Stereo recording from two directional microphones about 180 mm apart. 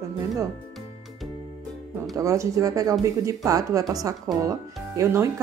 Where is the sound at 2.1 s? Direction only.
20° right (ahead or behind).